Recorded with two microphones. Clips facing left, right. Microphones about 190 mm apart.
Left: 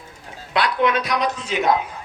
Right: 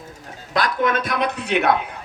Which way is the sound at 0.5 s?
45° right (ahead or behind).